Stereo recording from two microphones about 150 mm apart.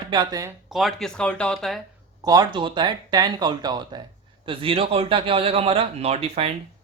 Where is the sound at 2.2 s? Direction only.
25° right (ahead or behind).